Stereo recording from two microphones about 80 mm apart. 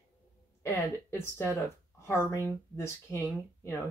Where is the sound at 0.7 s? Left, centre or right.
Left.